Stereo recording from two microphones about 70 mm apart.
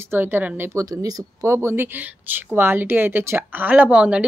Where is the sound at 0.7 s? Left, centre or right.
Right.